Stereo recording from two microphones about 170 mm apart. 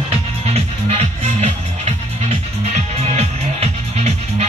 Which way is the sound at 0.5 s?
40° right (ahead or behind).